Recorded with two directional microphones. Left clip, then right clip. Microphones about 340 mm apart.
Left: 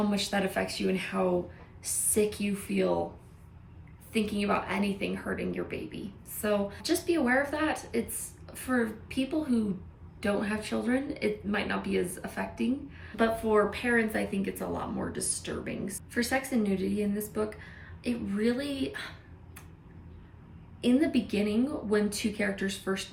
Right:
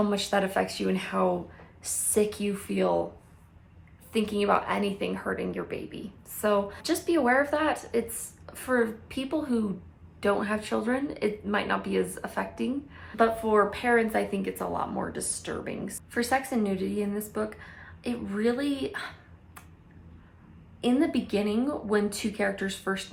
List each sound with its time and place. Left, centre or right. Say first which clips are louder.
0.1 s speech: right 4 dB; centre
4.1 s speech: right 4 dB; centre
20.8 s speech: right 1 dB; centre